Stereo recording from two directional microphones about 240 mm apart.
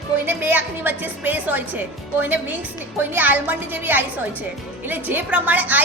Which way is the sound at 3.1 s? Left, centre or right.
Centre.